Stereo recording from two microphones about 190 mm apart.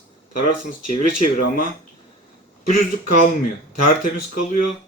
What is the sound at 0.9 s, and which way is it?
Speech, 45° left (ahead or behind).